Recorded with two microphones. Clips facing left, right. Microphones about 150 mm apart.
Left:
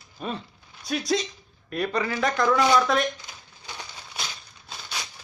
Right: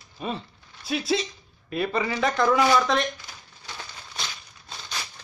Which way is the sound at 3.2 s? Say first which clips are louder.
Even; 10° left (ahead or behind).